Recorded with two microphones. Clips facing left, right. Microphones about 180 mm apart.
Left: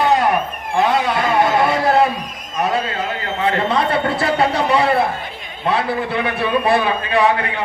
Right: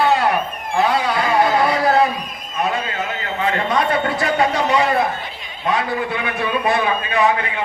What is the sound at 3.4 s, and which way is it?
A man's voice, 30° left (ahead or behind).